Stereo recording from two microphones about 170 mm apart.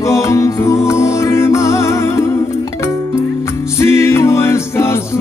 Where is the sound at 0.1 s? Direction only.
15° left (ahead or behind).